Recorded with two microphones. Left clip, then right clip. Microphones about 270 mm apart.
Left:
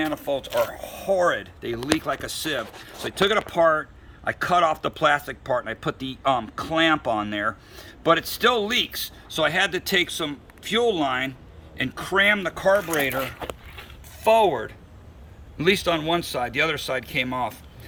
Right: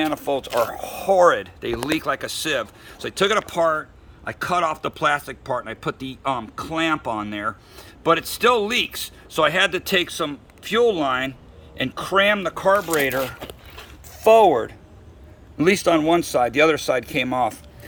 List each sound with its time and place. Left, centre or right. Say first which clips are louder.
0.0 s speech: right 3 dB; centre